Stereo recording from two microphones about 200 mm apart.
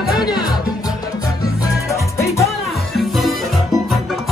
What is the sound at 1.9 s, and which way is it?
Music, 15° left (ahead or behind).